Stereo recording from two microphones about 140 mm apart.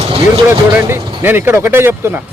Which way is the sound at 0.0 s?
40° right (ahead or behind).